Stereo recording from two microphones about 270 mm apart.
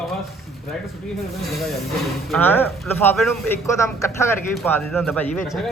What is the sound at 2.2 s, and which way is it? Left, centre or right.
Speech, centre.